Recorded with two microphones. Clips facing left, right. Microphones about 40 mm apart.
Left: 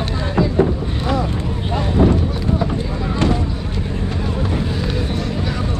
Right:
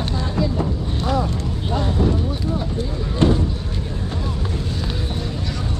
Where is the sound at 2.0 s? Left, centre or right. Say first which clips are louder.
Left 7 dB; left.